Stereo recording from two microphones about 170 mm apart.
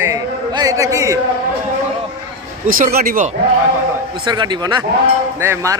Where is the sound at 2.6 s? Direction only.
55° right (ahead or behind).